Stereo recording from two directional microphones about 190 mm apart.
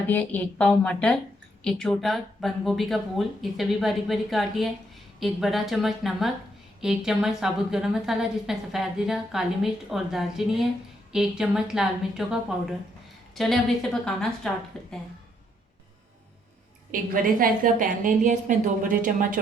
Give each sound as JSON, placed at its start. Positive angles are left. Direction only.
{"t": 0.1, "sound": "a woman's voice", "side_deg": 10}
{"t": 17.4, "sound": "a woman's voice", "side_deg": -45}